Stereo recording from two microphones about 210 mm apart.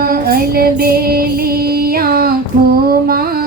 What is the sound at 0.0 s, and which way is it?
Female singing, 45° right (ahead or behind).